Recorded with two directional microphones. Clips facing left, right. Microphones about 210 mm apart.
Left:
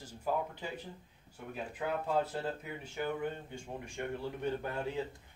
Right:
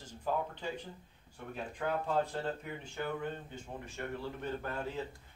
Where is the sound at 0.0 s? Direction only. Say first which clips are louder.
Even; 10° left (ahead or behind).